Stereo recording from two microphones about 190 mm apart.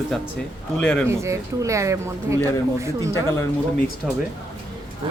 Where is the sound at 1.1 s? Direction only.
15° right (ahead or behind).